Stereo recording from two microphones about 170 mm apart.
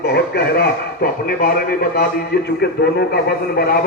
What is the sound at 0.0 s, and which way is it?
A man's voice, 75° left (ahead or behind).